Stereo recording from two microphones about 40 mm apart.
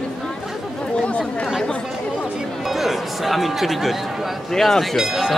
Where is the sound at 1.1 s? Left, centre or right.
Left.